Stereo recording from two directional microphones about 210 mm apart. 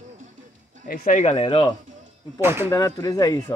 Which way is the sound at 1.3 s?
25° left (ahead or behind).